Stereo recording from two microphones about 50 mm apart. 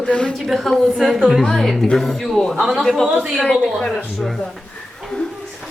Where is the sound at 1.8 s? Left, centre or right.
Centre.